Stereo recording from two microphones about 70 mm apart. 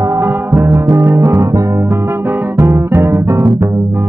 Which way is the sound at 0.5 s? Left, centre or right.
Right.